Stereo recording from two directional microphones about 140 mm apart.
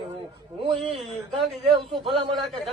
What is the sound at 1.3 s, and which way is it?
A man's voice, centre (ahead or behind).